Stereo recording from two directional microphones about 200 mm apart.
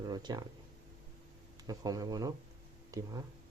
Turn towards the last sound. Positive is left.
turn(degrees=-15)  # may be behind; listen again after turning